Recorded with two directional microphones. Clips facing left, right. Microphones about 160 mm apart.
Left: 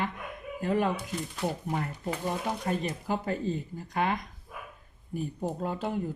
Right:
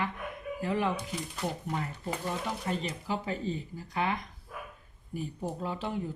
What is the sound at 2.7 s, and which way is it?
Speech, 50° left (ahead or behind).